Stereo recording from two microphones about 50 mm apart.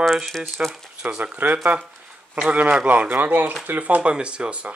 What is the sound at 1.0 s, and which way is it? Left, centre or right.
Speech, right.